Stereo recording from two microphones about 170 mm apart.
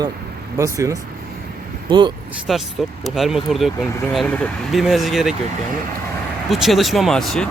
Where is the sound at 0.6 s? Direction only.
20° right (ahead or behind).